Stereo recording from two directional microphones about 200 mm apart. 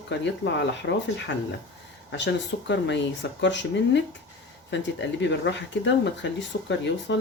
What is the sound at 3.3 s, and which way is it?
Speech, 60° left (ahead or behind).